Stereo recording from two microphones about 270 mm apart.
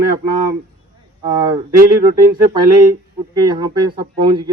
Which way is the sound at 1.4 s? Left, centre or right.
Centre.